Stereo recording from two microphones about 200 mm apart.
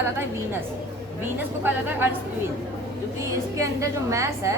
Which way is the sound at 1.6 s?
10° right (ahead or behind).